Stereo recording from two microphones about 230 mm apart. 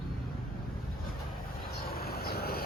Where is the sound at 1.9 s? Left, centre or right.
Left.